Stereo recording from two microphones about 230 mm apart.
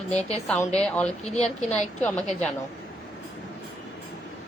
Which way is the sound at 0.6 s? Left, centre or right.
Left.